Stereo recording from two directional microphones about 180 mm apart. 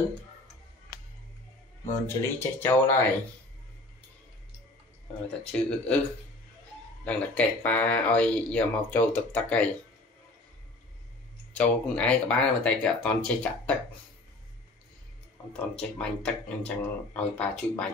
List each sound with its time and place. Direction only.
1.9 s speech: 15° left (ahead or behind)
5.5 s speech: 5° left (ahead or behind)
7.1 s speech: 10° left (ahead or behind)
11.5 s speech: 5° left (ahead or behind)
15.8 s speech: 5° left (ahead or behind)